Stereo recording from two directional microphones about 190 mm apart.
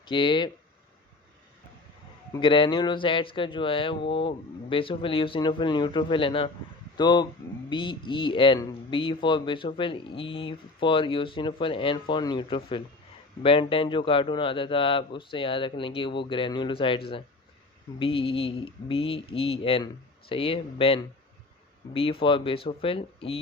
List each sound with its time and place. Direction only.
0.0 s speech: 25° left (ahead or behind)
2.3 s speech: 25° left (ahead or behind)